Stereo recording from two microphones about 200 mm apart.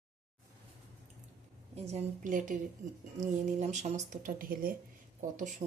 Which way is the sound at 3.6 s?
35° right (ahead or behind).